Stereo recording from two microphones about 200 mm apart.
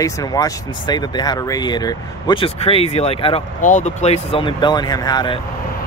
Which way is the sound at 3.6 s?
40° left (ahead or behind).